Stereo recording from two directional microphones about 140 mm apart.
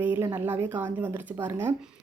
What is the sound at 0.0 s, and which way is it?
Speech, 15° right (ahead or behind).